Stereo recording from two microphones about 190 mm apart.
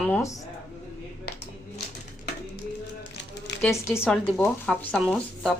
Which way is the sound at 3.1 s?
65° left (ahead or behind).